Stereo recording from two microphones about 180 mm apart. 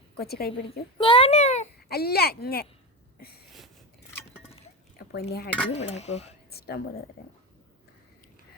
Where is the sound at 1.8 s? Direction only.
60° left (ahead or behind).